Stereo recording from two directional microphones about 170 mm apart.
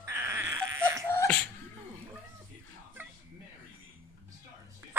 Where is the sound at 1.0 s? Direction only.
15° left (ahead or behind).